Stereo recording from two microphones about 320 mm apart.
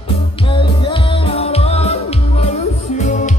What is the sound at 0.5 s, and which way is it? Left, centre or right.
Music, centre.